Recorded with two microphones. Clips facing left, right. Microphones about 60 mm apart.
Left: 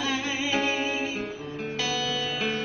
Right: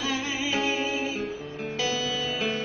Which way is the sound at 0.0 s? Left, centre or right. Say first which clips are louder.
Left 1 dB; centre.